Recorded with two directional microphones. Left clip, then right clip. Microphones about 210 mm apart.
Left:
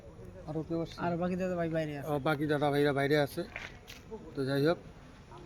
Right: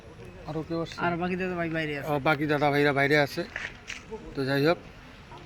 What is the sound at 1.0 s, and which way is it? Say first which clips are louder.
Speech: right 5 dB; 35° left (ahead or behind).